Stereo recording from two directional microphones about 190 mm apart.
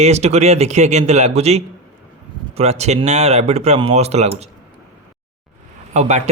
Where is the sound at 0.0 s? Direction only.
35° right (ahead or behind).